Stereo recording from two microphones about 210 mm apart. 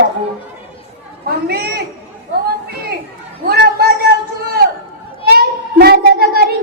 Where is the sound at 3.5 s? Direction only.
50° right (ahead or behind).